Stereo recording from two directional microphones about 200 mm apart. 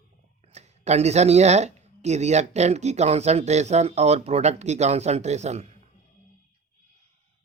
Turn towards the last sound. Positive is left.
turn(degrees=-35)  # may be behind; listen again after turning